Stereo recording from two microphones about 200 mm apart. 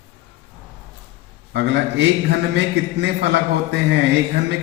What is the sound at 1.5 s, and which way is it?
A man's voice, 60° right (ahead or behind).